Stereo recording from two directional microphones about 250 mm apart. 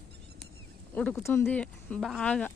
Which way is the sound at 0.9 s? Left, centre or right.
Centre.